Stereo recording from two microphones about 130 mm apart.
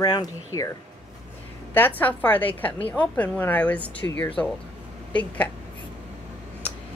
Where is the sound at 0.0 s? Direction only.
35° left (ahead or behind).